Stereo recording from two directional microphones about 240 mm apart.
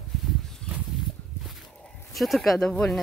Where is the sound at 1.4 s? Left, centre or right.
Centre.